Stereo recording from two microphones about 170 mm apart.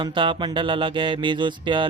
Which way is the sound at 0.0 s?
30° right (ahead or behind).